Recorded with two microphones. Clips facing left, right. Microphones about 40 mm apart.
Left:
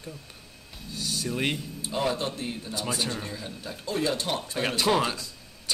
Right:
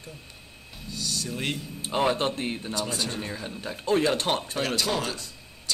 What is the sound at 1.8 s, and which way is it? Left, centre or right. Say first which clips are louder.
Speech: right 4 dB; right.